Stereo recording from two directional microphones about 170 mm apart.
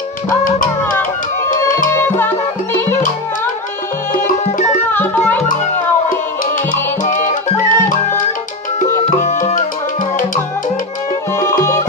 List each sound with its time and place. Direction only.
0.4 s music: 50° left (ahead or behind)
1.9 s music: 15° left (ahead or behind)
4.9 s music: 10° left (ahead or behind)
7.1 s music: 50° left (ahead or behind)
9.2 s tabla: 45° left (ahead or behind)